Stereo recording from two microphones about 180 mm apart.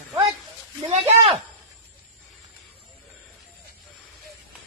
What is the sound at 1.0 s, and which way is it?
Speech, 30° right (ahead or behind).